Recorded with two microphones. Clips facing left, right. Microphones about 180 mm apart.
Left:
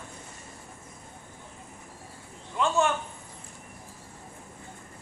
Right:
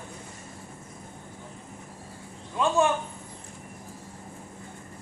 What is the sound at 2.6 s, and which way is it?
Speech, 15° right (ahead or behind).